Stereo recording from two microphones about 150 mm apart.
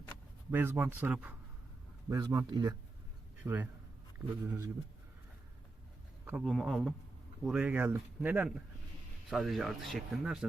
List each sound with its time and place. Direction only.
0.5 s speech: 15° right (ahead or behind)
2.0 s a man's voice: 25° right (ahead or behind)
3.4 s speech: 10° right (ahead or behind)
6.2 s speech: 5° right (ahead or behind)